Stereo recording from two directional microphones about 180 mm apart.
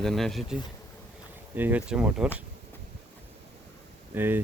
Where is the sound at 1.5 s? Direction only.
10° right (ahead or behind).